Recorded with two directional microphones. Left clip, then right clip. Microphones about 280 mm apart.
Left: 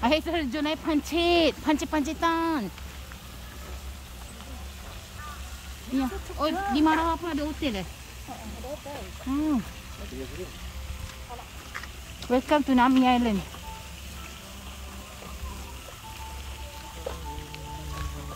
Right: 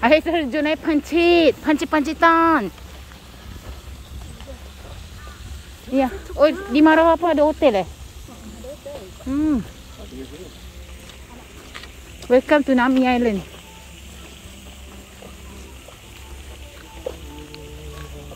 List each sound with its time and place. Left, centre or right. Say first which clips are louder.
0.0 s speech: right 9 dB; centre
5.9 s speech: right 12 dB; centre
12.3 s speech: right 8 dB; centre
17.1 s music: right 6 dB; right